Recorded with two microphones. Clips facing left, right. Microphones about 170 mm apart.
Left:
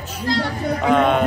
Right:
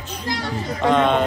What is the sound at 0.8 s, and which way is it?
Speech, 5° left (ahead or behind).